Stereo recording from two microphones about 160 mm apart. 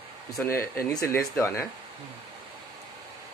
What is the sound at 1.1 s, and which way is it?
Speech, 20° left (ahead or behind).